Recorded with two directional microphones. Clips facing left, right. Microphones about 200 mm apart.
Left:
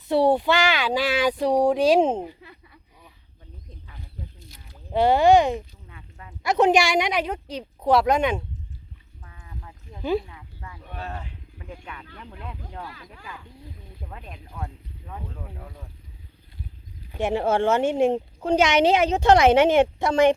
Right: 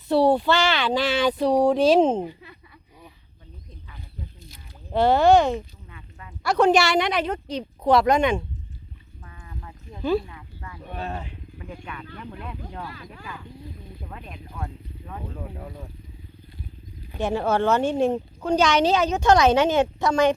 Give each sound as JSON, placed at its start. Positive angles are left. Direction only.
{"t": 0.1, "sound": "speech", "side_deg": 20}
{"t": 4.9, "sound": "speech", "side_deg": 15}
{"t": 5.9, "sound": "a sound", "side_deg": 35}
{"t": 6.4, "sound": "a woman's voice", "side_deg": 20}
{"t": 9.3, "sound": "sheep", "side_deg": 10}
{"t": 10.9, "sound": "wild animals", "side_deg": -20}
{"t": 11.9, "sound": "speech", "side_deg": 20}
{"t": 17.2, "sound": "a woman's voice", "side_deg": 25}